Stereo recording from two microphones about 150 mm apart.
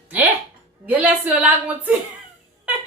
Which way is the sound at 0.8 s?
10° right (ahead or behind).